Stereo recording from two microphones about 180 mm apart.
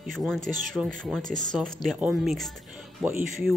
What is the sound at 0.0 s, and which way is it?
Speech, centre (ahead or behind).